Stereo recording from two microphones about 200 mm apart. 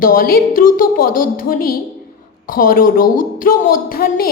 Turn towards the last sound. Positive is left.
turn(degrees=45)  # may be behind; listen again after turning